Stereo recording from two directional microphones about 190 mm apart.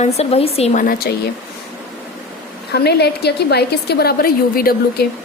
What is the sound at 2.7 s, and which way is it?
A woman's voice, 60° left (ahead or behind).